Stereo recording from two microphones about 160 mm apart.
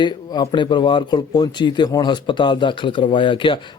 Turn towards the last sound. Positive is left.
turn(degrees=30)  # may be behind; listen again after turning